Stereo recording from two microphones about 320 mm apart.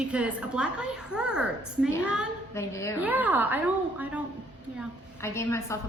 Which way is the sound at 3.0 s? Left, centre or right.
Centre.